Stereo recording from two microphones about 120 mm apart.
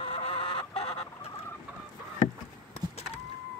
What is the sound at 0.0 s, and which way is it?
Chicken, 50° left (ahead or behind).